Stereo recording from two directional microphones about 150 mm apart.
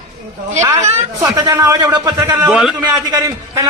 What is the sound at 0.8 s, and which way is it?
Speech, 50° right (ahead or behind).